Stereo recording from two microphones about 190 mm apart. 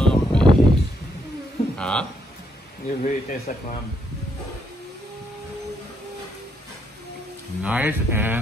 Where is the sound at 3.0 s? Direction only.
40° left (ahead or behind).